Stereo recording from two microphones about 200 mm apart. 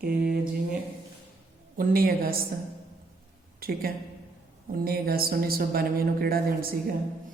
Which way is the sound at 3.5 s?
50° right (ahead or behind).